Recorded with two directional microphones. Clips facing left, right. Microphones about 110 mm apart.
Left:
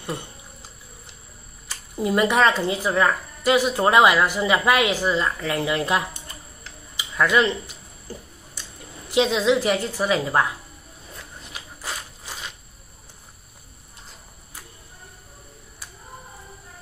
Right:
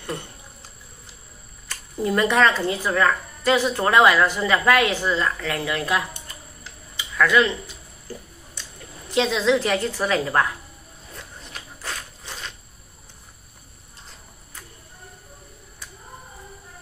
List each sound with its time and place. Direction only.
1.7 s speech: 15° left (ahead or behind)
9.1 s speech: 15° left (ahead or behind)
11.5 s walk: 5° left (ahead or behind)